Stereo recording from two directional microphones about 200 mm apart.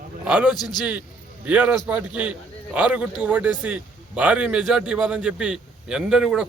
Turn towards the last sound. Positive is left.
turn(degrees=-5)  # may be behind; listen again after turning